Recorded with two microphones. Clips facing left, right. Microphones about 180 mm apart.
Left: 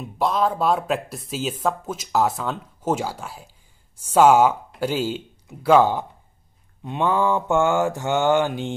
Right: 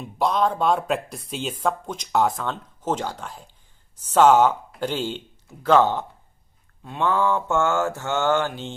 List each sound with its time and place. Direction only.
0.0 s speech: centre (ahead or behind)
6.8 s mantra: 15° left (ahead or behind)